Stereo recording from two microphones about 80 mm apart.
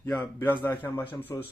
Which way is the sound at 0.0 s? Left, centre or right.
Left.